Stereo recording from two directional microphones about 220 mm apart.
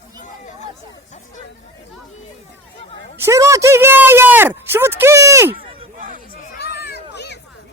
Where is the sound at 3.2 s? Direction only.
15° right (ahead or behind).